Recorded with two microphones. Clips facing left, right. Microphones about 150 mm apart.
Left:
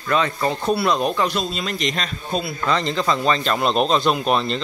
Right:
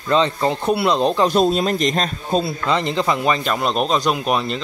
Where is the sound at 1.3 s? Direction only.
45° right (ahead or behind).